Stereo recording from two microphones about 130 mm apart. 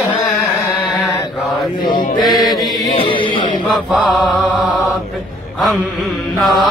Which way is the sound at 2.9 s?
40° left (ahead or behind).